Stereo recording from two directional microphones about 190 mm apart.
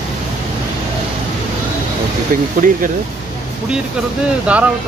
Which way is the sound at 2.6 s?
45° right (ahead or behind).